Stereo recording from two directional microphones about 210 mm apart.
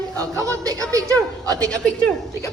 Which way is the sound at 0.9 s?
15° right (ahead or behind).